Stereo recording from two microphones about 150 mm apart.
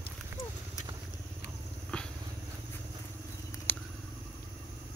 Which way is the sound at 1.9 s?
5° left (ahead or behind).